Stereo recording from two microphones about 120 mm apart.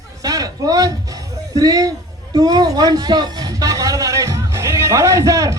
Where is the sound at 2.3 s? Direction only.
35° right (ahead or behind).